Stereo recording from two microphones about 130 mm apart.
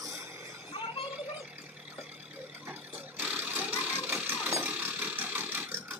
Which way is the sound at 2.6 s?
15° right (ahead or behind).